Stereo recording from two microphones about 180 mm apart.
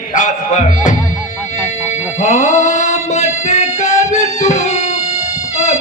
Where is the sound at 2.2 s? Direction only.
40° left (ahead or behind).